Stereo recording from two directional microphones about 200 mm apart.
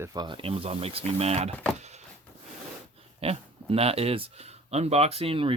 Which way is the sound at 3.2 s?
30° right (ahead or behind).